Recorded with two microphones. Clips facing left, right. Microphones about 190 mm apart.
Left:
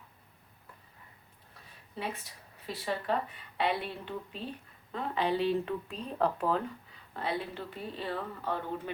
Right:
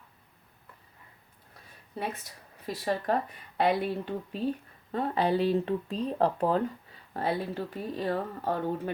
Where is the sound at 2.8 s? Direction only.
45° right (ahead or behind).